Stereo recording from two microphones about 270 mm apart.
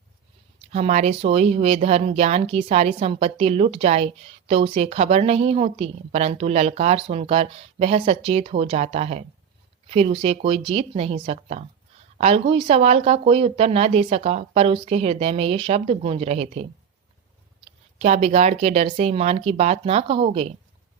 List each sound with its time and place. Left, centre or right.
0.7 s speech: right
17.7 s speech: right